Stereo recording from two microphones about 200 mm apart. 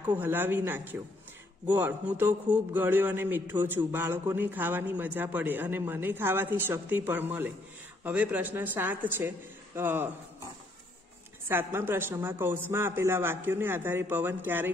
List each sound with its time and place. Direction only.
0.1 s a man's voice: 10° right (ahead or behind)
11.4 s a man's voice: 10° right (ahead or behind)